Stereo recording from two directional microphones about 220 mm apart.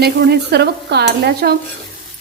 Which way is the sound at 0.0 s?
50° right (ahead or behind).